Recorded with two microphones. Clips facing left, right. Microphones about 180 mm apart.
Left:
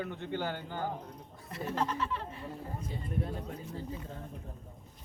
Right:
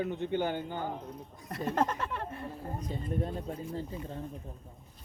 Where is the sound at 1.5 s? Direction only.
50° right (ahead or behind).